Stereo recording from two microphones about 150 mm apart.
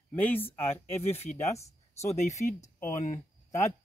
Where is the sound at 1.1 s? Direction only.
45° left (ahead or behind).